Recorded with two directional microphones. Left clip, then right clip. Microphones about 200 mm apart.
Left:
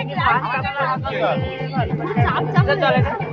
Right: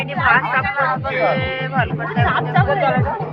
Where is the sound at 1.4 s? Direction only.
Centre (ahead or behind).